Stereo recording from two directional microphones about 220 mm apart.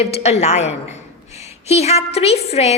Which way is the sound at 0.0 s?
30° left (ahead or behind).